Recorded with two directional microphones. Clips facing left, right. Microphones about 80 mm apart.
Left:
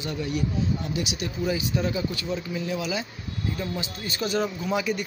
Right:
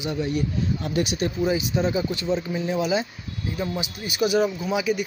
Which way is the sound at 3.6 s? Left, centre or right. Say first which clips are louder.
Right 3 dB; centre.